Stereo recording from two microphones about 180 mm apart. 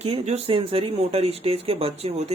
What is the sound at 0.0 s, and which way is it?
Speech, 35° right (ahead or behind).